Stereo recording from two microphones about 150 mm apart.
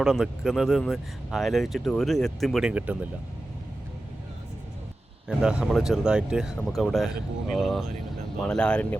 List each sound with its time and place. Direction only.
0.0 s speech: centre (ahead or behind)
5.4 s speech: 5° right (ahead or behind)